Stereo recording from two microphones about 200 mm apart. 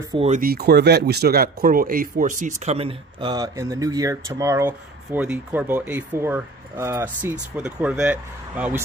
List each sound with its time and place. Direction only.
0.1 s speech: 30° right (ahead or behind)
0.4 s speech: 50° right (ahead or behind); by 8.8 s 5° right (ahead or behind)